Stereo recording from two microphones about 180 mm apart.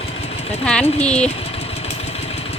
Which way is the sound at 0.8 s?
35° left (ahead or behind).